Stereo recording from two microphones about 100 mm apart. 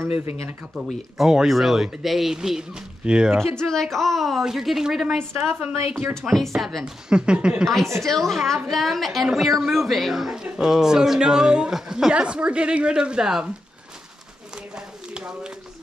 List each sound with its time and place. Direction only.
0.7 s a woman's voice: centre (ahead or behind)
3.3 s a woman's voice: 5° left (ahead or behind)
5.0 s a woman's voice: 20° right (ahead or behind)
6.2 s a woman's voice: centre (ahead or behind)
7.6 s a woman's voice: centre (ahead or behind)
15.1 s a sound: 10° right (ahead or behind)